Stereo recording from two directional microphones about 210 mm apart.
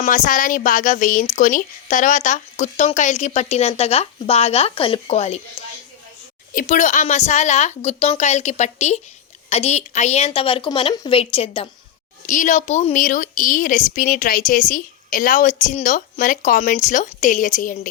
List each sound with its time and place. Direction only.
0.0 s a woman's voice: 40° left (ahead or behind)
6.5 s a woman's voice: 40° left (ahead or behind)
12.2 s a woman's voice: 35° left (ahead or behind)